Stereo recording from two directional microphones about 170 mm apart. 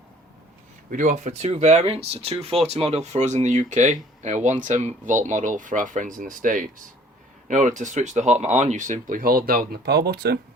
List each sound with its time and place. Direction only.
0.9 s speech: 50° right (ahead or behind); by 10.4 s 70° right (ahead or behind)